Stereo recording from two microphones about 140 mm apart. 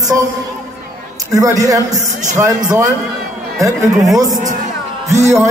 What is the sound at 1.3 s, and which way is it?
A man's voice, 25° right (ahead or behind).